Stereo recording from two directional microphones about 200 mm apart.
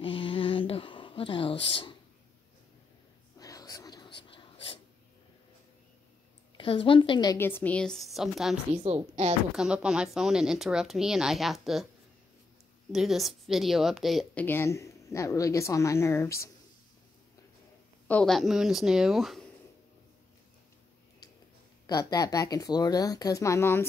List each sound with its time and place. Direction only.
0.0 s a sound: 25° left (ahead or behind)
3.3 s a sound: 15° left (ahead or behind)
6.5 s a woman's voice: 25° left (ahead or behind); by 8.5 s centre (ahead or behind)
8.7 s a woman's voice: 30° right (ahead or behind)
9.6 s speech: 5° right (ahead or behind)
12.9 s a woman's voice: centre (ahead or behind)
18.0 s speech: 5° left (ahead or behind)
21.8 s a woman's voice: 20° left (ahead or behind)